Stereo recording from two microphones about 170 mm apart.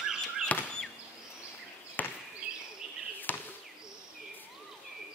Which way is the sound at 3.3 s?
10° left (ahead or behind).